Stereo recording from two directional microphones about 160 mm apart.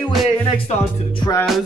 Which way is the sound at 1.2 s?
25° left (ahead or behind).